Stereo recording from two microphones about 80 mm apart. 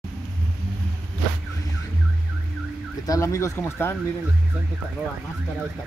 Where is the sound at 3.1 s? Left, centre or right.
Left.